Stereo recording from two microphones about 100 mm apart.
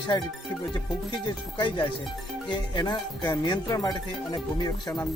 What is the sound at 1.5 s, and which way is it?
Speech, 50° left (ahead or behind).